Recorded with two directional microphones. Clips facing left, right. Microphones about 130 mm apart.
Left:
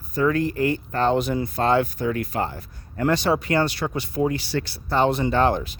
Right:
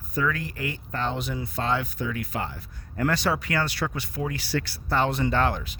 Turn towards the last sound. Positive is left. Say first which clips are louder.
# left 4 dB
turn(degrees=25)  # may be behind; listen again after turning